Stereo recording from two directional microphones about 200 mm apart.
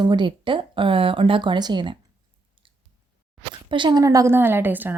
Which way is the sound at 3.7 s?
25° right (ahead or behind).